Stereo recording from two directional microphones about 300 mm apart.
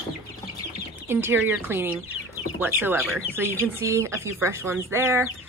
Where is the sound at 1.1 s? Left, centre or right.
Centre.